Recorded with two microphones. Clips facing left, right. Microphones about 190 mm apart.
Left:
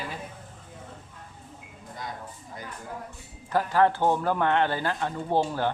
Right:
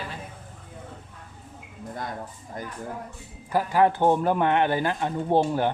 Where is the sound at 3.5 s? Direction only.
15° right (ahead or behind).